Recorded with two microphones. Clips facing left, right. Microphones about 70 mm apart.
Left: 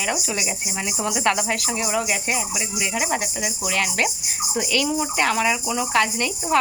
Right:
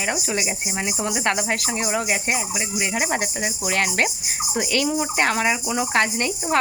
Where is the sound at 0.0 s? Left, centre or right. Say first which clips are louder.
Right 1 dB; right.